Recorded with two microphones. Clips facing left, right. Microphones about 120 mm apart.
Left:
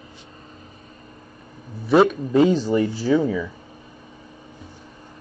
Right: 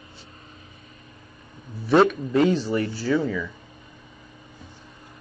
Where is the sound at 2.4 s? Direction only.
40° left (ahead or behind).